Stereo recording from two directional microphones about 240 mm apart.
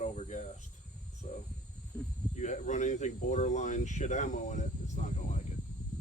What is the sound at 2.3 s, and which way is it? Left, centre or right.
Speech, left.